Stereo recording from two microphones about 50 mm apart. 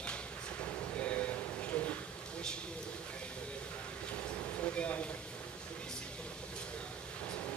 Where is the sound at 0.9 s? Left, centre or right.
Left.